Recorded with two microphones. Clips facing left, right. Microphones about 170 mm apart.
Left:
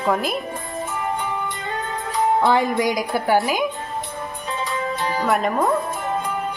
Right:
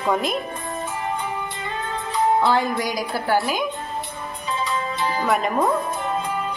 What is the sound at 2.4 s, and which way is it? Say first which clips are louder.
A woman's voice: left 3 dB; 20° left (ahead or behind).